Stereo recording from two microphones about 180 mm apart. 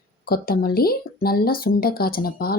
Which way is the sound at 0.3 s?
55° left (ahead or behind).